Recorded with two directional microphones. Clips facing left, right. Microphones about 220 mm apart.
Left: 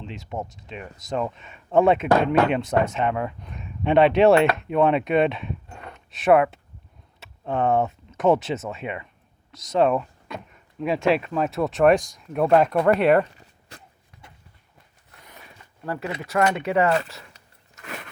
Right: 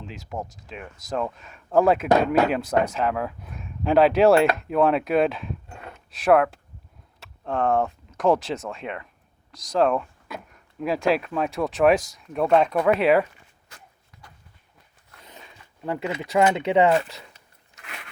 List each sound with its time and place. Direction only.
0.0 s speech: centre (ahead or behind)
15.2 s a sound: 20° right (ahead or behind)
15.9 s speech: 20° right (ahead or behind)